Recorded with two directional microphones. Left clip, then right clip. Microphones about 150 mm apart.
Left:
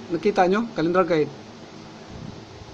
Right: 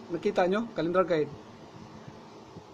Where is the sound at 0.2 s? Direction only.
Centre (ahead or behind).